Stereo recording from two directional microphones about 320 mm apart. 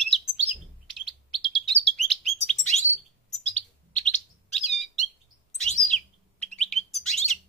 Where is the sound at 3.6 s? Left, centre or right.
Left.